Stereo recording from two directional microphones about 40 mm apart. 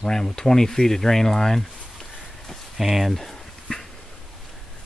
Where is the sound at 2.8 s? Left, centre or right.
Centre.